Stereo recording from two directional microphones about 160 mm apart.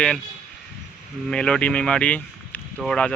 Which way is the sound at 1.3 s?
5° left (ahead or behind).